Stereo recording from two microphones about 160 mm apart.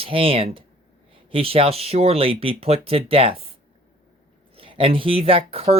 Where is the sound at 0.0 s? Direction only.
35° right (ahead or behind).